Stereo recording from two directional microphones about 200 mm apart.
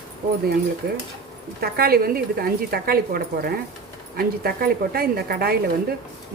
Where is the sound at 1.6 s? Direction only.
50° right (ahead or behind).